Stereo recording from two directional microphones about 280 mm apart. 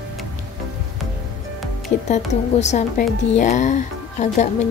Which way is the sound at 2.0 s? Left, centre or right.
Left.